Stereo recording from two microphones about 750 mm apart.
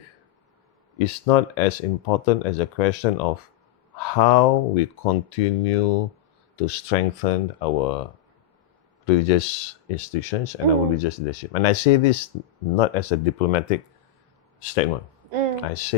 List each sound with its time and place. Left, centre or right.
0.9 s speech: left
9.0 s speech: left
15.3 s a sound: right
15.6 s speech: left